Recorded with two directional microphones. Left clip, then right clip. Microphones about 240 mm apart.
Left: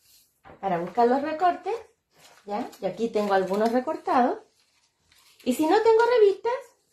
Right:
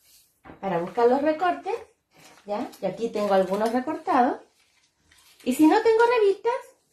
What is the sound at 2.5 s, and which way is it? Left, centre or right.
Speech, left.